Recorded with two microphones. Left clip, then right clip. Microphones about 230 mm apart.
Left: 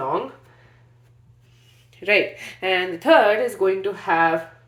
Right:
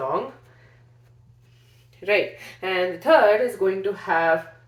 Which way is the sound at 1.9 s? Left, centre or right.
Left.